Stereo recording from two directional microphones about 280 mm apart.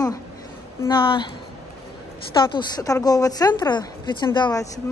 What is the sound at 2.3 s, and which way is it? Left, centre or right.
Speech, centre.